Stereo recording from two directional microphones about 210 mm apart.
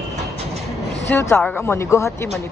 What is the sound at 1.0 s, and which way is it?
Speech, 10° left (ahead or behind).